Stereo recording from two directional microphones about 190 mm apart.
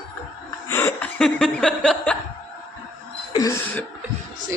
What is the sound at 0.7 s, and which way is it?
Chuckle, 10° left (ahead or behind).